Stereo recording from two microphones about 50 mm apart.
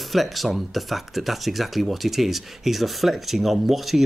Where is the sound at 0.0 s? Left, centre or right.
Centre.